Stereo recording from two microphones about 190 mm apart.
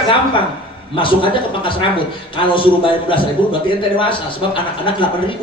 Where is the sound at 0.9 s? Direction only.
25° left (ahead or behind).